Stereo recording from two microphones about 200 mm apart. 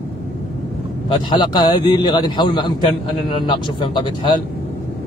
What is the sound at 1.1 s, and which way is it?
A man's voice, 25° left (ahead or behind).